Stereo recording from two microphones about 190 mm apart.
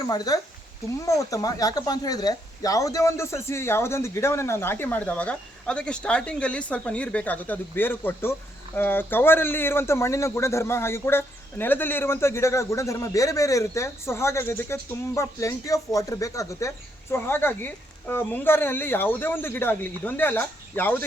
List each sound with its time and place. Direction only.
0.3 s speech: 20° left (ahead or behind)